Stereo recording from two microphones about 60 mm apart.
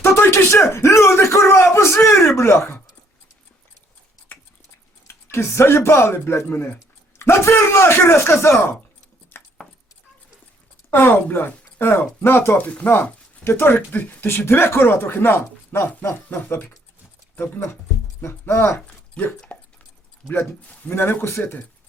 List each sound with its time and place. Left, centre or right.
0.0 s bellow: left
5.0 s speech: left
9.3 s a sound: left
10.9 s speech: left
12.5 s speech: left
19.2 s speech: centre
20.4 s a man's voice: left
20.9 s speech: left